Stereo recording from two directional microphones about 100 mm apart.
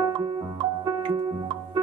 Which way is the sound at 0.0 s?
45° right (ahead or behind).